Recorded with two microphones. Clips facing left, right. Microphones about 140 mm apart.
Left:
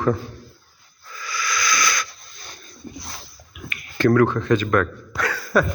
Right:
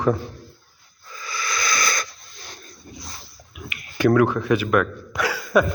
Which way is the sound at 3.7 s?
15° right (ahead or behind).